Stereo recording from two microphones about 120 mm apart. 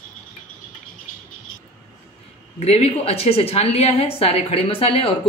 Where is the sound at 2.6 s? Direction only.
60° left (ahead or behind).